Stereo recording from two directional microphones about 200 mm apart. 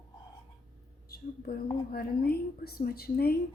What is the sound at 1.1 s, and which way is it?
A woman's voice, 50° left (ahead or behind).